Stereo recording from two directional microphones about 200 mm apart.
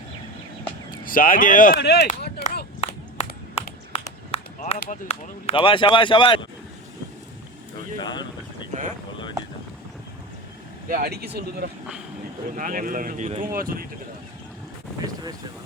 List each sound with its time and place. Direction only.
0.9 s speech: 45° left (ahead or behind)
2.4 s a sound: 50° left (ahead or behind)
2.8 s a sound: 30° left (ahead or behind)
3.9 s run: 35° left (ahead or behind)
5.0 s speech: 25° left (ahead or behind)
7.9 s speech: 20° left (ahead or behind)
10.8 s speech: 45° right (ahead or behind)
15.0 s speech: 20° right (ahead or behind)